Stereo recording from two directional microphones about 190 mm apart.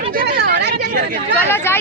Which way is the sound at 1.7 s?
10° left (ahead or behind).